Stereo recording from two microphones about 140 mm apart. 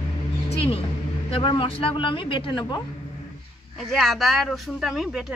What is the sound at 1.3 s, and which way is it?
A man's voice, 35° left (ahead or behind).